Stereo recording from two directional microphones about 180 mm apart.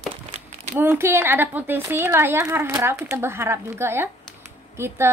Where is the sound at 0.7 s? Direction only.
10° right (ahead or behind).